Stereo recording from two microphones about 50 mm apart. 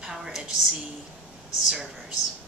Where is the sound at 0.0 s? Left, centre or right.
Centre.